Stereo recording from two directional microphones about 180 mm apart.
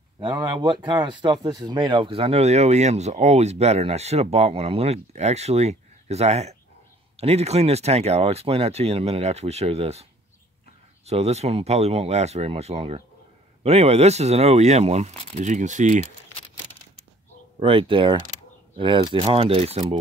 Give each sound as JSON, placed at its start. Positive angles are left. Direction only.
{"t": 0.2, "sound": "speech", "side_deg": -25}
{"t": 11.1, "sound": "speech", "side_deg": -35}
{"t": 17.6, "sound": "speech", "side_deg": -30}